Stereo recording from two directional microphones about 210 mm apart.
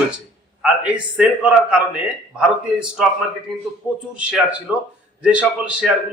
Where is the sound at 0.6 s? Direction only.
5° right (ahead or behind).